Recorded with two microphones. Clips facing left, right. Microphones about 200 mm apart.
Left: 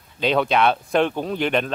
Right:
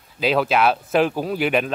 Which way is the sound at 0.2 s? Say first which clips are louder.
Even; 5° right (ahead or behind).